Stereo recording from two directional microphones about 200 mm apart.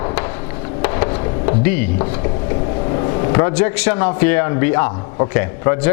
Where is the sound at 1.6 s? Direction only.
10° left (ahead or behind).